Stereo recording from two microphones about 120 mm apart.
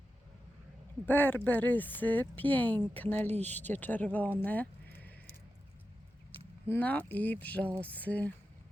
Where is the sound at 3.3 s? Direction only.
70° right (ahead or behind).